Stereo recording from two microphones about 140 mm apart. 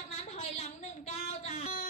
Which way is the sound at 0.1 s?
55° left (ahead or behind).